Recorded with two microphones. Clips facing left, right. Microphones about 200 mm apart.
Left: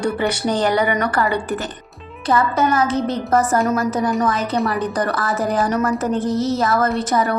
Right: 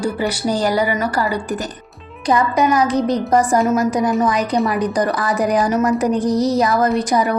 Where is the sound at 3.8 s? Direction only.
15° right (ahead or behind).